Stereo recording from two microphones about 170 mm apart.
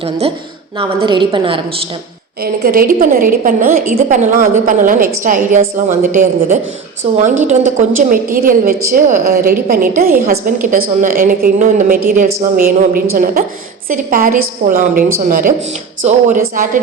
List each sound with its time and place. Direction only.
0.0 s a woman's voice: 35° right (ahead or behind)
2.4 s a woman's voice: 60° right (ahead or behind)